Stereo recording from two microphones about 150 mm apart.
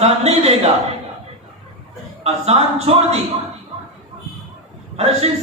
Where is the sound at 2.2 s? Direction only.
45° right (ahead or behind).